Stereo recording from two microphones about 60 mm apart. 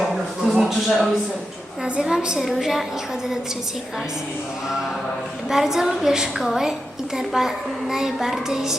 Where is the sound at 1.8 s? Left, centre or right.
Centre.